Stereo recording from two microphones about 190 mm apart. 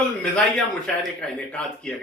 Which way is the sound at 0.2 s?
5° left (ahead or behind).